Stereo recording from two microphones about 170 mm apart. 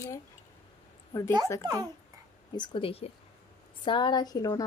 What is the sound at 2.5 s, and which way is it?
A woman's voice, 30° left (ahead or behind).